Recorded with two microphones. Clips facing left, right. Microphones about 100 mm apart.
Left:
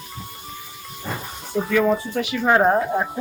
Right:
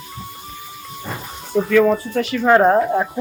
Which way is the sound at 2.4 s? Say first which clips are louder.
Right 4 dB; 5° left (ahead or behind).